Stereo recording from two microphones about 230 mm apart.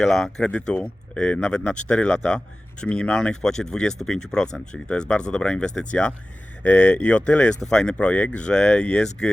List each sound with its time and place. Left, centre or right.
0.0 s speech: centre